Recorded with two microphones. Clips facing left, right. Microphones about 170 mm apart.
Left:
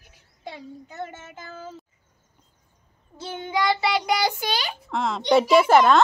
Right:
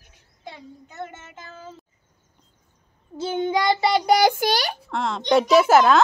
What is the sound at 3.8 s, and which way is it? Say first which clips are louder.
Child singing: right 5 dB; 40° right (ahead or behind).